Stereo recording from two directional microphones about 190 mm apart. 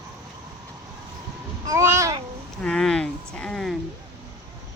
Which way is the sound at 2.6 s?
5° left (ahead or behind).